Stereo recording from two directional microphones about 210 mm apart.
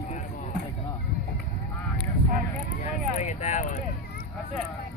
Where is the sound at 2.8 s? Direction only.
35° left (ahead or behind).